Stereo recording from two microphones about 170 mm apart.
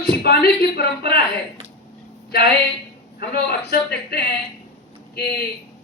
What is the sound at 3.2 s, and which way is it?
A man's voice, 70° left (ahead or behind).